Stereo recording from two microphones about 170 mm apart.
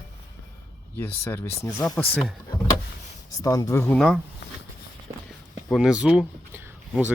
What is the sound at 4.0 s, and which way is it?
Speech, centre (ahead or behind).